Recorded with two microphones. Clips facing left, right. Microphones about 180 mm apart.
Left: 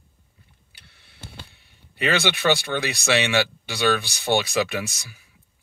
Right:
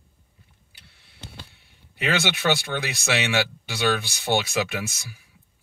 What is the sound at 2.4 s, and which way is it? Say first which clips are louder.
Speech: left 2 dB; 5° right (ahead or behind).